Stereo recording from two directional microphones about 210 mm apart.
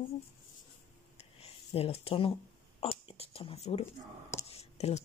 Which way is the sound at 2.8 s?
25° left (ahead or behind).